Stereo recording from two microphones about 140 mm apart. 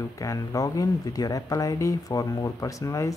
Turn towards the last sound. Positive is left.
turn(degrees=20)  # may be behind; listen again after turning